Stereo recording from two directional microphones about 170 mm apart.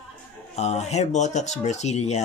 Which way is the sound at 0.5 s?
40° left (ahead or behind).